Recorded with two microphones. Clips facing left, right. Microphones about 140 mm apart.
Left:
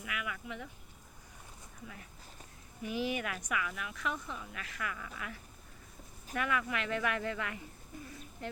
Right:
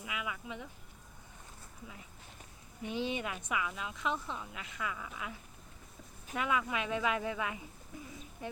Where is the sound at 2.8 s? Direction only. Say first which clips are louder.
Left 1 dB; 25° right (ahead or behind).